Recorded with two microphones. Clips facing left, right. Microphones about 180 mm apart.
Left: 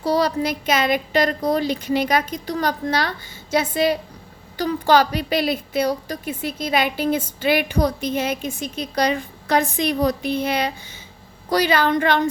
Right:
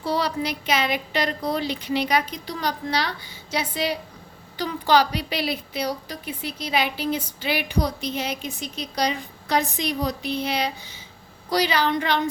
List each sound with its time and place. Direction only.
0.0 s a woman's voice: 40° left (ahead or behind)